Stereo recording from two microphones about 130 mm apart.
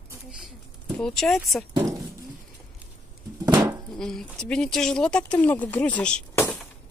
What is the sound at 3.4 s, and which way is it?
Goat, 25° right (ahead or behind).